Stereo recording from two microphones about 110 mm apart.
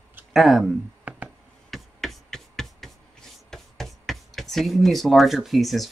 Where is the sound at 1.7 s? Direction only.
Centre (ahead or behind).